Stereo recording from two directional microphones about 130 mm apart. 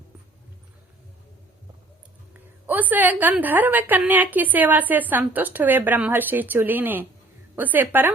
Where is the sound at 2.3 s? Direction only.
15° right (ahead or behind).